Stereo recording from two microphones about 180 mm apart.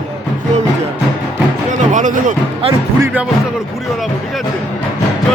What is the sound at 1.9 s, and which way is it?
Speech, 45° right (ahead or behind).